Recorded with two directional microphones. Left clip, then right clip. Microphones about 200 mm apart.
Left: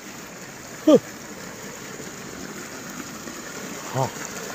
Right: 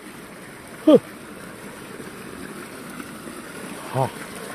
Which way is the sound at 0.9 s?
15° right (ahead or behind).